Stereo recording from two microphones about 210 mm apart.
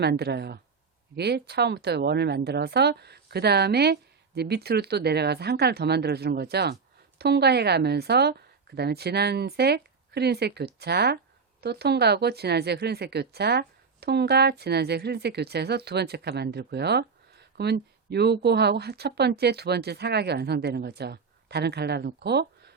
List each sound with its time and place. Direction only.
0.0 s speech: 50° right (ahead or behind)